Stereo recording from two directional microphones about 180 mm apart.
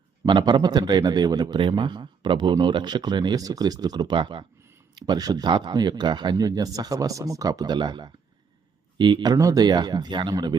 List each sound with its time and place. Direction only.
0.3 s a man's voice: 25° right (ahead or behind)